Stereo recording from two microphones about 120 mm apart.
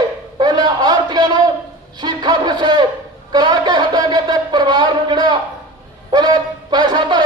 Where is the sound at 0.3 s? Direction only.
40° right (ahead or behind).